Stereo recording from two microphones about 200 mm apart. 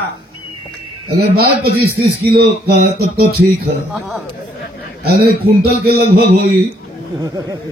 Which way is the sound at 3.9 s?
5° right (ahead or behind).